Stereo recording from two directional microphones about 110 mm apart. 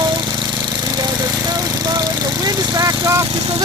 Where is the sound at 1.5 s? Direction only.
35° right (ahead or behind).